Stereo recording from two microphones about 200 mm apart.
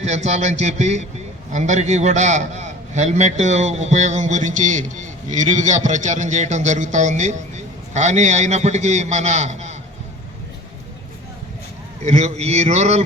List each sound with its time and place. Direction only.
0.0 s a man's voice: 35° right (ahead or behind)
12.0 s a man's voice: 35° right (ahead or behind)